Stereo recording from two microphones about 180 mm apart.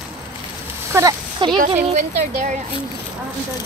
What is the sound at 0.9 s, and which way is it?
Speech, 20° right (ahead or behind).